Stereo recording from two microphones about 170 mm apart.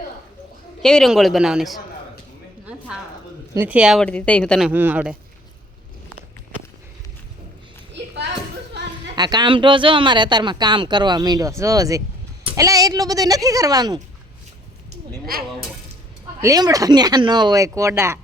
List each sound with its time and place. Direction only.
0.8 s a man's voice: 5° left (ahead or behind)
2.6 s a sound: 5° right (ahead or behind)
3.5 s speech: 10° right (ahead or behind)
4.0 s a man's voice: 5° left (ahead or behind)
4.7 s speech: 10° right (ahead or behind)
9.1 s speech: 25° right (ahead or behind)
15.3 s speech: 60° right (ahead or behind)
16.4 s speech: 20° right (ahead or behind)